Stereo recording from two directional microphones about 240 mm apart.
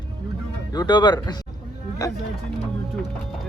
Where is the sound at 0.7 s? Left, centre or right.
Centre.